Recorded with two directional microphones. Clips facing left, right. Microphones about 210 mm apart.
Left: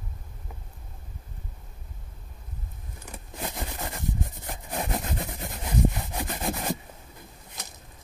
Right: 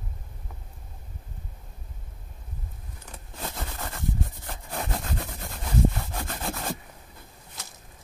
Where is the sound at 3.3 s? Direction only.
15° left (ahead or behind).